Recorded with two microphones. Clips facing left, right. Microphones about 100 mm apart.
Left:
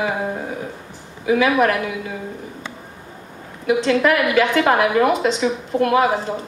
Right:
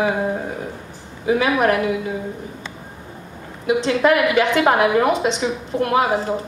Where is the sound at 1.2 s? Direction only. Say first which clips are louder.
Left 1 dB; 30° right (ahead or behind).